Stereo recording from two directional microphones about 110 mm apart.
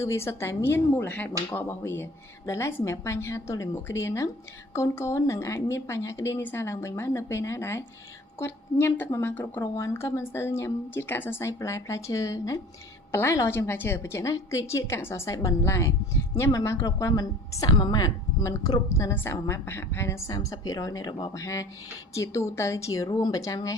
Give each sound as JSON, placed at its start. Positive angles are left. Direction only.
{"t": 0.0, "sound": "a woman's voice", "side_deg": 25}